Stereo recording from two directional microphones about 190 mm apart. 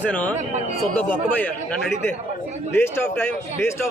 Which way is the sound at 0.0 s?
5° left (ahead or behind).